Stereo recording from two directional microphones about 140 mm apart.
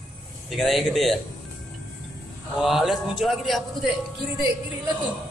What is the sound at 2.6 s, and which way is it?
A man's voice, centre (ahead or behind).